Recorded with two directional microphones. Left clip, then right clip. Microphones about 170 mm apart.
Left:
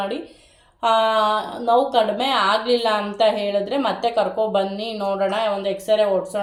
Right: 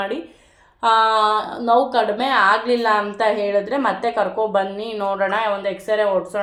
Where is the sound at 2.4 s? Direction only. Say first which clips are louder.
Right 5 dB; 65° right (ahead or behind).